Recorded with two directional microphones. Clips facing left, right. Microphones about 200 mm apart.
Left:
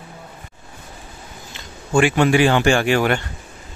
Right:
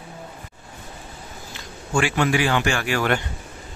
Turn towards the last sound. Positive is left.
turn(degrees=25)  # may be behind; listen again after turning